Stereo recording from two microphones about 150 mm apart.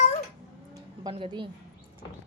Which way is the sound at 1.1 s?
35° right (ahead or behind).